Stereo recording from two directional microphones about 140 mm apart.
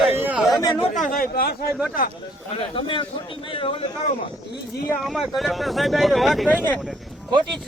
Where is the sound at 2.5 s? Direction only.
40° left (ahead or behind).